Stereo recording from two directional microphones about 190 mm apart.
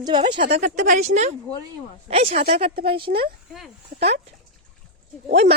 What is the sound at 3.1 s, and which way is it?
Speech, 50° right (ahead or behind).